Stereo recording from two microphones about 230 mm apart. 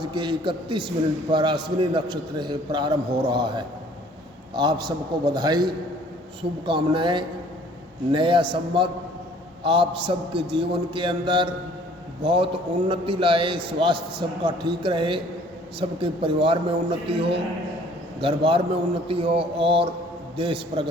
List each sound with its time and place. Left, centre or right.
0.0 s a man's voice: centre